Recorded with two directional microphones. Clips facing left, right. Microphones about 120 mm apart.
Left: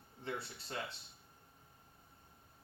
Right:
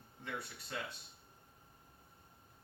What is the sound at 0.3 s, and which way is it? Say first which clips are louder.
Speech: left 2 dB; 30° left (ahead or behind).